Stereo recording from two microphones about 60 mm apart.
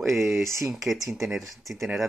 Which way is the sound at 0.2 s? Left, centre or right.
Right.